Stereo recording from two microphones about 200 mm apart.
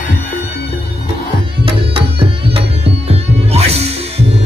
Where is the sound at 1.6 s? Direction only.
25° right (ahead or behind).